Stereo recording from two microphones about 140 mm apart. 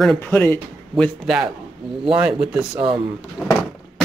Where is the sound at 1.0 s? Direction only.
5° right (ahead or behind).